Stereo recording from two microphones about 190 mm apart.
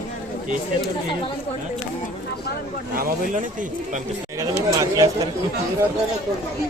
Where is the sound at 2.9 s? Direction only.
45° right (ahead or behind).